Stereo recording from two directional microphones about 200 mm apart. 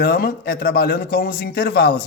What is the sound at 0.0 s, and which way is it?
A man's voice, 50° left (ahead or behind).